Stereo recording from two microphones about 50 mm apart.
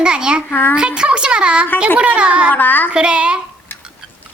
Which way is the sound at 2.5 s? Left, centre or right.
Left.